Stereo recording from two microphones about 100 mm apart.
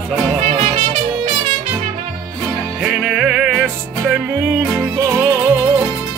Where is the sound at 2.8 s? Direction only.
10° right (ahead or behind).